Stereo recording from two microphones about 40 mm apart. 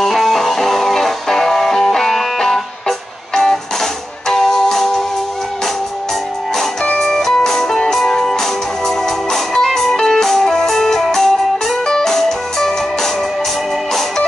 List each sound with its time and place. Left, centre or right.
0.0 s music: centre
6.5 s music: centre
6.9 s music: left
7.2 s music: centre